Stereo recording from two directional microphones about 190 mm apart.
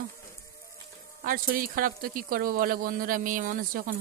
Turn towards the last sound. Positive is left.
turn(degrees=-45)  # may be behind; listen again after turning